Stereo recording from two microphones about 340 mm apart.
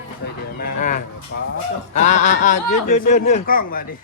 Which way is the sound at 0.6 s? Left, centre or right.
Left.